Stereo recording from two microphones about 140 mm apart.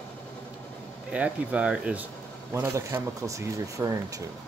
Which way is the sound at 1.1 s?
10° right (ahead or behind).